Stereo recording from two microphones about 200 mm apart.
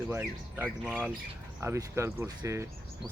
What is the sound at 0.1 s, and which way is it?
Speech, 10° right (ahead or behind).